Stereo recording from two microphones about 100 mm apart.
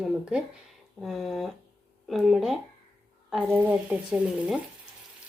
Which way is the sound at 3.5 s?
20° right (ahead or behind).